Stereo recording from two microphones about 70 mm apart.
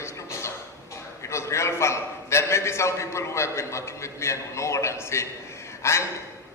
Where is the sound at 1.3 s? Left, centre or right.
Left.